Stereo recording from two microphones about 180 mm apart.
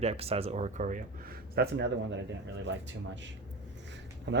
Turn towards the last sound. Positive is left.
turn(degrees=-75)  # may be behind; listen again after turning